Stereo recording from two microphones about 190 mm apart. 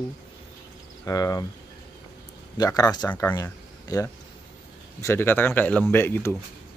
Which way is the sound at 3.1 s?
10° left (ahead or behind).